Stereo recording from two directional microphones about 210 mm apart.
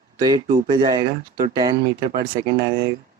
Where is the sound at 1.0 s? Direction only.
40° right (ahead or behind).